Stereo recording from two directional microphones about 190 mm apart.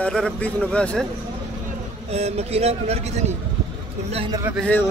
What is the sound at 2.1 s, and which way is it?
A man's voice, 35° right (ahead or behind).